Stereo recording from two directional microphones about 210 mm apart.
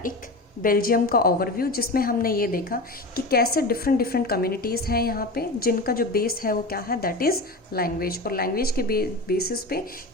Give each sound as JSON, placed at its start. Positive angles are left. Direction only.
{"t": 0.6, "sound": "a woman's voice", "side_deg": 45}